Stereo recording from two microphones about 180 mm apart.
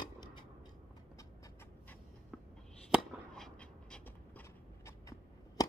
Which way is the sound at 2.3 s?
5° right (ahead or behind).